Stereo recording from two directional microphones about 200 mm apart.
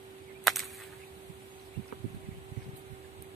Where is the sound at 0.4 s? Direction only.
Centre (ahead or behind).